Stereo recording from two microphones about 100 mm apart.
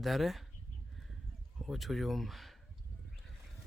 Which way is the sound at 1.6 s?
Centre (ahead or behind).